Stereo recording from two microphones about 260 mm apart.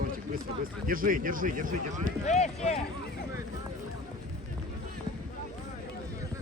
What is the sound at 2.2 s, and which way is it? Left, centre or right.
Speech, left.